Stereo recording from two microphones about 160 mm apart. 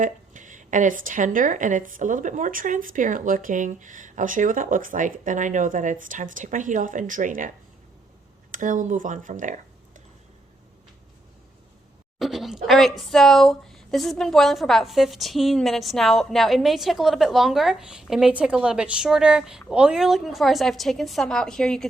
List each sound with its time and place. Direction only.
0.0 s speech: 55° right (ahead or behind)
8.5 s speech: 55° right (ahead or behind)
12.2 s speech: centre (ahead or behind)